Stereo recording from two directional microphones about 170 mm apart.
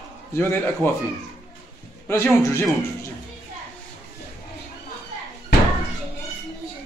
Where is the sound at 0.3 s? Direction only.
15° left (ahead or behind).